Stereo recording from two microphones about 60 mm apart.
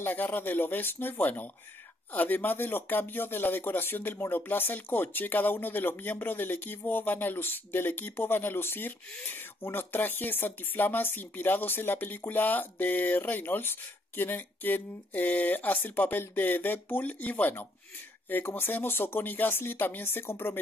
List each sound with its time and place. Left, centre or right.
0.0 s speech: left